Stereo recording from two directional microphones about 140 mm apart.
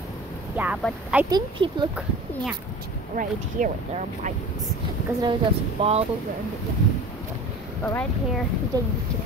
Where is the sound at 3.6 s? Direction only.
70° right (ahead or behind).